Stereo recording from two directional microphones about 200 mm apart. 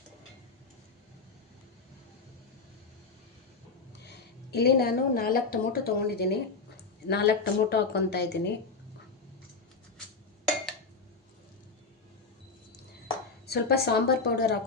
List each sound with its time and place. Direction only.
4.0 s a woman's voice: 55° left (ahead or behind)
13.5 s a woman's voice: 55° left (ahead or behind)